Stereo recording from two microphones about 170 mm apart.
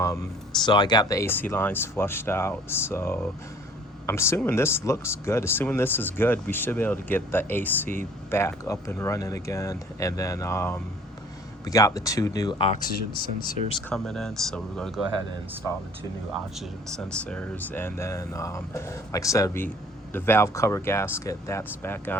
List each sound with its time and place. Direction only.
0.6 s speech: 25° left (ahead or behind)
12.8 s speech: 55° left (ahead or behind)
13.9 s speech: centre (ahead or behind)
16.6 s speech: 5° left (ahead or behind)